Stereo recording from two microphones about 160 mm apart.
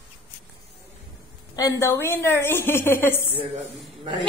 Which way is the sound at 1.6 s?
20° left (ahead or behind).